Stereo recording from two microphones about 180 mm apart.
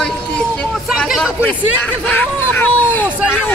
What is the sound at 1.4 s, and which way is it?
Speech, 10° left (ahead or behind).